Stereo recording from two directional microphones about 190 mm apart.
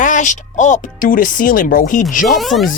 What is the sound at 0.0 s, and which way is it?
Speech, 40° left (ahead or behind).